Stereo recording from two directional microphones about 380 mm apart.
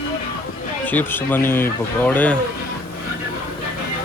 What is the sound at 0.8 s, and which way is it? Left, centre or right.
Speech, centre.